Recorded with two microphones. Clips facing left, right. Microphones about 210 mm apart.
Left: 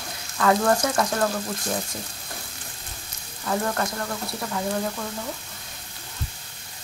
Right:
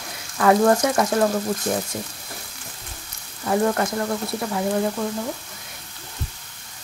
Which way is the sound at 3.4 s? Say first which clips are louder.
Right 5 dB; 25° right (ahead or behind).